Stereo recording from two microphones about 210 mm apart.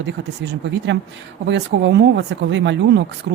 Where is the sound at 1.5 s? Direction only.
55° right (ahead or behind).